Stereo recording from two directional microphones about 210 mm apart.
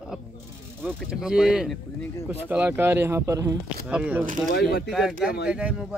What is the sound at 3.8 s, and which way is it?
Speech, 5° right (ahead or behind).